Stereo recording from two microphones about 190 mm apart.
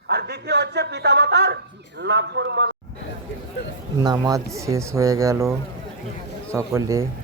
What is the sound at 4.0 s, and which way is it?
Speech, 20° right (ahead or behind).